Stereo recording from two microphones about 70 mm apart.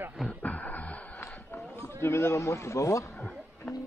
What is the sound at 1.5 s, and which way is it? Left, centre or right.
Run, left.